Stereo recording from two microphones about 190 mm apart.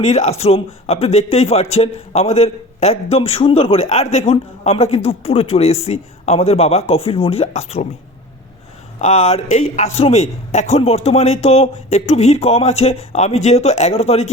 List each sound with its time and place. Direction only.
0.0 s a man's voice: 35° left (ahead or behind)
9.0 s a man's voice: 35° left (ahead or behind)